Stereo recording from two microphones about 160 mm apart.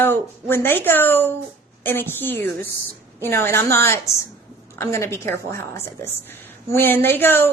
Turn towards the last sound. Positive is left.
turn(degrees=15)  # may be behind; listen again after turning